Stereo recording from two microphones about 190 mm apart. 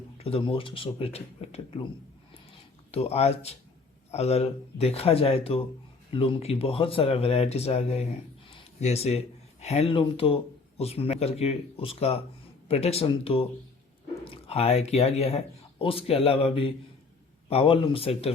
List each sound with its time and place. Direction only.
0.2 s speech: 30° left (ahead or behind)
2.9 s speech: 35° left (ahead or behind)